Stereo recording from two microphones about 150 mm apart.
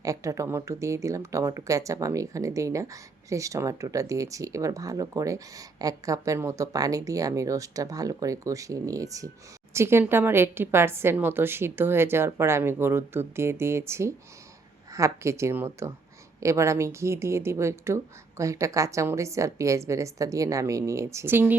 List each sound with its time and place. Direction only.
0.0 s a woman's voice: 20° right (ahead or behind)